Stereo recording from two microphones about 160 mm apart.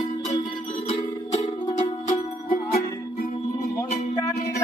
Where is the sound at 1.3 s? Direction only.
45° left (ahead or behind).